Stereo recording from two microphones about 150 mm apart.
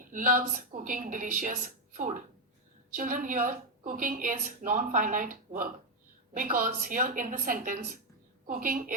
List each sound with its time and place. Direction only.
0.1 s a woman's voice: 65° right (ahead or behind)